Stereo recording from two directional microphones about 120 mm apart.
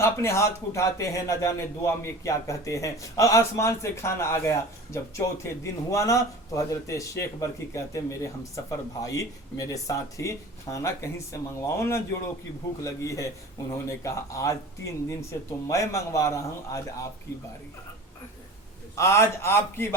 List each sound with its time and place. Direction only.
0.0 s speech: 25° left (ahead or behind)
18.9 s speech: 25° left (ahead or behind)